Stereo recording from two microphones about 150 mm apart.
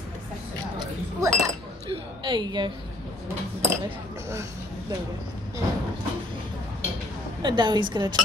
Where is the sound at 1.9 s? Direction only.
30° right (ahead or behind).